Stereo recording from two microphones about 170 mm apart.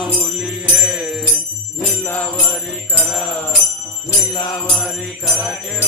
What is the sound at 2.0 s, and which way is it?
Music, 10° left (ahead or behind).